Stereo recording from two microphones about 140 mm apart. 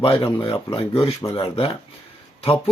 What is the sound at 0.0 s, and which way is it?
Speech, 40° left (ahead or behind).